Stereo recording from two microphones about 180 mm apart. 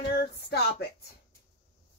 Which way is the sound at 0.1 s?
65° left (ahead or behind).